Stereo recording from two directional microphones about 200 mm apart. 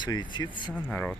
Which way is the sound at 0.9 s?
5° left (ahead or behind).